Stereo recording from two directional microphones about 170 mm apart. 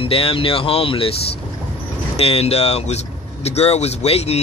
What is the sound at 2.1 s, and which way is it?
Speech, 35° left (ahead or behind).